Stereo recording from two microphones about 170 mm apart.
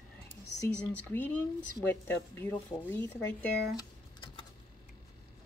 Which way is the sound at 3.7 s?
25° left (ahead or behind).